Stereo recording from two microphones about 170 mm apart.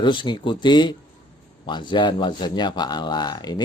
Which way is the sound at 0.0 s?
30° left (ahead or behind).